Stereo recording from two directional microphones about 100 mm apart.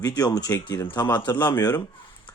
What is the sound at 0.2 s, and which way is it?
Speech, 40° left (ahead or behind).